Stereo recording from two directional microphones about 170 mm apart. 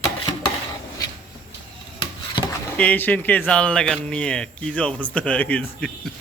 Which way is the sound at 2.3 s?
25° left (ahead or behind).